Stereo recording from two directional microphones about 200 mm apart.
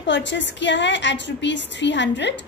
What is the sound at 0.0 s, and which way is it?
Music, 65° left (ahead or behind).